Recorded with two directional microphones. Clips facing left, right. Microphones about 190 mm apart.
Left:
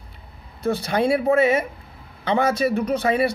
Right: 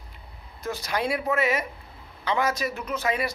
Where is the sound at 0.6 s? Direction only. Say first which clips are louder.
Left 8 dB; 30° left (ahead or behind).